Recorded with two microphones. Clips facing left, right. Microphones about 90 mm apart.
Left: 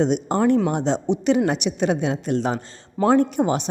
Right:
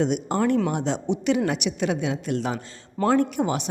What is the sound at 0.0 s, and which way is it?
A woman's voice, 30° left (ahead or behind).